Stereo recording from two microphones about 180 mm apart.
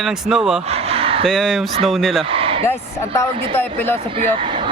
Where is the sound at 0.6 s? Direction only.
35° right (ahead or behind).